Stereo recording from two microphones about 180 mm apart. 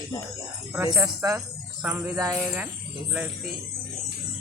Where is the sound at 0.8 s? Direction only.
20° right (ahead or behind).